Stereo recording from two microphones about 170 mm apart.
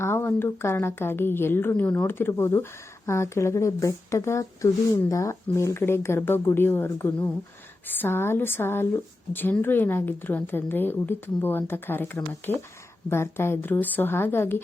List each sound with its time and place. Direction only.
0.0 s speech: 15° left (ahead or behind)